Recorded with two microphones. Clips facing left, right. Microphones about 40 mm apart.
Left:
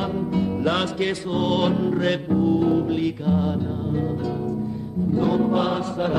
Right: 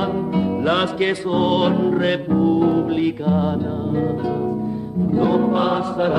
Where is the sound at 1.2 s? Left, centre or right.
Centre.